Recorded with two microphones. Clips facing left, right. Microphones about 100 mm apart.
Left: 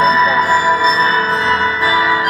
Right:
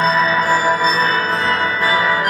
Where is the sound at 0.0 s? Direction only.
45° right (ahead or behind).